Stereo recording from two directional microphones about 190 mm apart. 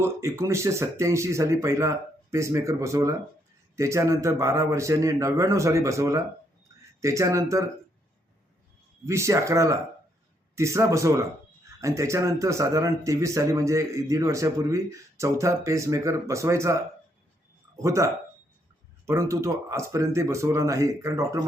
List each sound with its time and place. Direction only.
0.0 s speech: 15° right (ahead or behind)
9.0 s speech: 15° right (ahead or behind)